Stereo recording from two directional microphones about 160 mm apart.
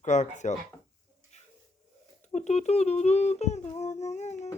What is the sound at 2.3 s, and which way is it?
Humming, 45° left (ahead or behind).